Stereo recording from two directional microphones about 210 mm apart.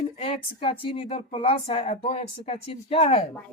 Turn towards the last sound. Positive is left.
turn(degrees=30)  # may be behind; listen again after turning